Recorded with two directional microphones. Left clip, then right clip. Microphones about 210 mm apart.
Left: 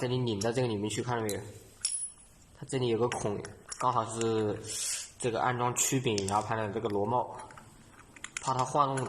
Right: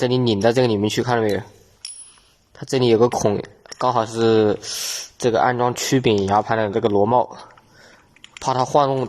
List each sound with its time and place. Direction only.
0.0 s speech: 45° right (ahead or behind)
2.6 s speech: 50° right (ahead or behind)
8.4 s speech: 50° right (ahead or behind)